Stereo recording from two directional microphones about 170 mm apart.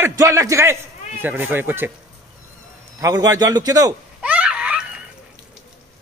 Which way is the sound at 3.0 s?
20° right (ahead or behind).